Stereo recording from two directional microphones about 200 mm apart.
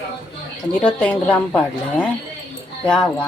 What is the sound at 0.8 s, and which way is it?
A woman's voice, 5° left (ahead or behind).